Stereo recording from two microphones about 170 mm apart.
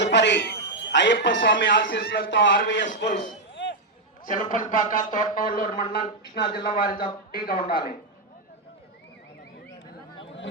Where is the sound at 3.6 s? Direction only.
90° left.